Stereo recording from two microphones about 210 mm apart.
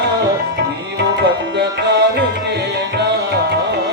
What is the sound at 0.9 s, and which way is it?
Tabla, 55° right (ahead or behind).